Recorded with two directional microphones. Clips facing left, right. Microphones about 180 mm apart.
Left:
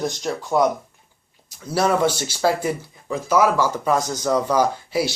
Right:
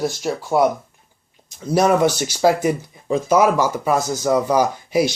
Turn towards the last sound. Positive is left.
turn(degrees=-15)  # may be behind; listen again after turning